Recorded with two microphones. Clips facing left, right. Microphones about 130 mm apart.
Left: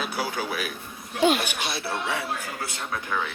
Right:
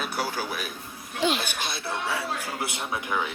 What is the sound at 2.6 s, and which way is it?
Speech, 20° right (ahead or behind).